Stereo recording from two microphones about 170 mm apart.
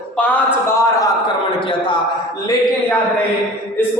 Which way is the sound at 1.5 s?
30° left (ahead or behind).